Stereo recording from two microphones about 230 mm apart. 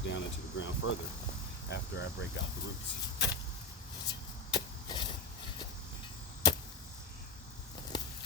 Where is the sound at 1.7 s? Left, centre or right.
Left.